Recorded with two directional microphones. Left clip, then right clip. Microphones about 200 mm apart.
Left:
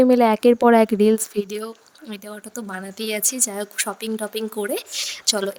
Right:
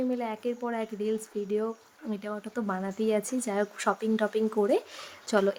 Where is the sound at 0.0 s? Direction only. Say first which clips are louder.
Left 16 dB; 55° left (ahead or behind).